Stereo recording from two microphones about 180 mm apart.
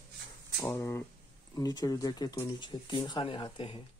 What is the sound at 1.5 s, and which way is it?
Speech, 20° left (ahead or behind).